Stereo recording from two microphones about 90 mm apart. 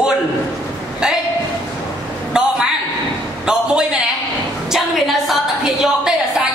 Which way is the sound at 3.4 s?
10° right (ahead or behind).